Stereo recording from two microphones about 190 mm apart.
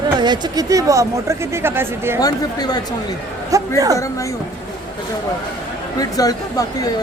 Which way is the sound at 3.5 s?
15° right (ahead or behind).